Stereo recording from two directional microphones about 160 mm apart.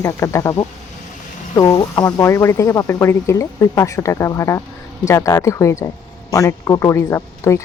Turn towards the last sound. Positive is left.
turn(degrees=20)  # may be behind; listen again after turning